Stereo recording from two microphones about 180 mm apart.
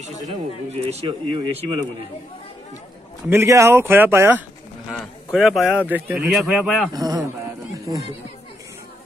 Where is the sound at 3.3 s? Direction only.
15° right (ahead or behind).